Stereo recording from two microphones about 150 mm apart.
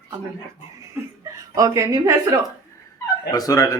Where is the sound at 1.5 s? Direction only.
20° right (ahead or behind).